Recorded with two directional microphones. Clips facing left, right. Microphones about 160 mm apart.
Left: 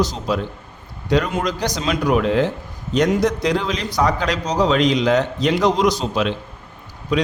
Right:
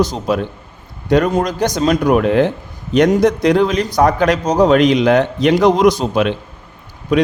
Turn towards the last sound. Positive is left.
turn(degrees=-50)  # may be behind; listen again after turning